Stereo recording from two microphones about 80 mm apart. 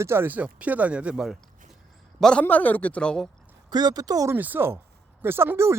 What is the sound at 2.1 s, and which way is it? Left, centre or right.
Speech, centre.